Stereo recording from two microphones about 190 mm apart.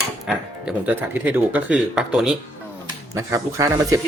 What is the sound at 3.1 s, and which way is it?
Speech, 15° right (ahead or behind).